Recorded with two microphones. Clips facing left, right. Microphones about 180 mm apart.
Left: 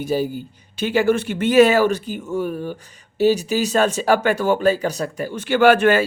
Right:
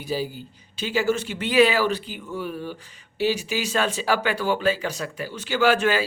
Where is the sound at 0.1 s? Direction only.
50° left (ahead or behind).